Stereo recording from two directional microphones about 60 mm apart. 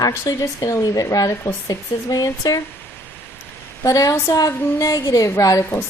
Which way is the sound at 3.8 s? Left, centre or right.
Left.